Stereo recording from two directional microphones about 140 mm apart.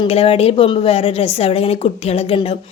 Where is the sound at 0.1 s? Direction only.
45° left (ahead or behind).